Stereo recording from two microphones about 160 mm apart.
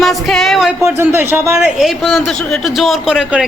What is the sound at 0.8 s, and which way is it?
Speech, 15° right (ahead or behind).